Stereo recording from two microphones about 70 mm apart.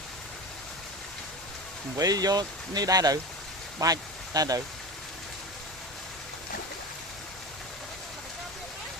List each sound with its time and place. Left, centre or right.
2.0 s speech: right